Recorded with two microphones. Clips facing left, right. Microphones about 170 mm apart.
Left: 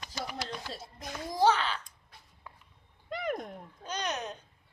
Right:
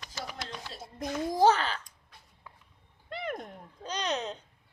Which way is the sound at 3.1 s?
Centre (ahead or behind).